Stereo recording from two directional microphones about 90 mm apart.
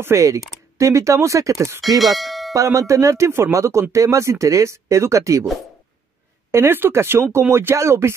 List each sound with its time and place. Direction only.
0.0 s speech: 35° right (ahead or behind)
2.0 s speech: centre (ahead or behind)
2.5 s speech: 40° right (ahead or behind)
6.5 s speech: 25° right (ahead or behind)